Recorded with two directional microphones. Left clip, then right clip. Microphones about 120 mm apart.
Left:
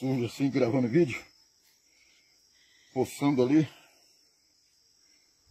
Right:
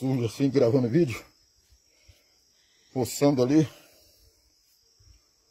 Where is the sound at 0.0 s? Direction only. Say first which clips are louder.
Right 3 dB; 35° right (ahead or behind).